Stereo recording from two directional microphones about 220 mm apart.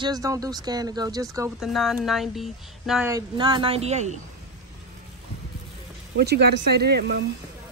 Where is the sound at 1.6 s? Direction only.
Centre (ahead or behind).